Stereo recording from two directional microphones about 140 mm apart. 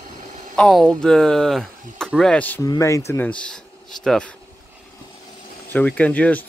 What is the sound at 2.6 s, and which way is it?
Speech, 25° left (ahead or behind).